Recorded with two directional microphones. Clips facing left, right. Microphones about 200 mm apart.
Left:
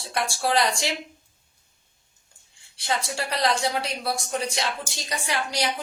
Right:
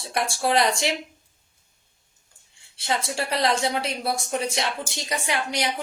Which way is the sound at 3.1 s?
25° right (ahead or behind).